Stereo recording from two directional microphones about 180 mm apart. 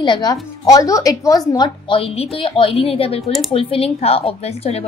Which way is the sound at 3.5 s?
30° left (ahead or behind).